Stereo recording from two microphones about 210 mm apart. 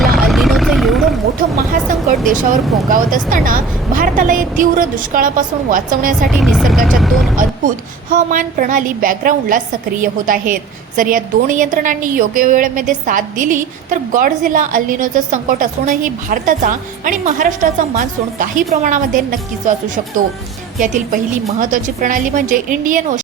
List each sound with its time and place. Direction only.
0.2 s vehicle: centre (ahead or behind)
1.4 s vehicle: 40° right (ahead or behind)
2.9 s a woman's voice: 40° right (ahead or behind)
6.3 s speech: centre (ahead or behind)
8.1 s a woman's voice: 40° right (ahead or behind)
20.7 s a woman's voice: 40° right (ahead or behind)